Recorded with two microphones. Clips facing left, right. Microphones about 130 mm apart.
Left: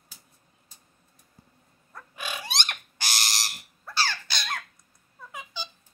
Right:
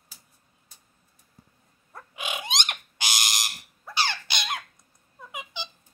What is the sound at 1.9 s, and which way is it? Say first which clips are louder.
Bird: right 2 dB; 20° right (ahead or behind).